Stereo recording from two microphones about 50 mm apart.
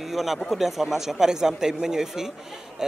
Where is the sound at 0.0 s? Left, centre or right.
Centre.